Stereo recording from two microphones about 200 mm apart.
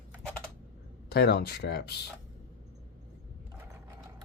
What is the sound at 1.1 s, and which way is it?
Speech, 50° left (ahead or behind).